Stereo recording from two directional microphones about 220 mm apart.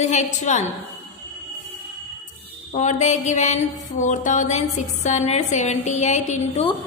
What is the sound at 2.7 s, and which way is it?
A woman's voice, 35° left (ahead or behind).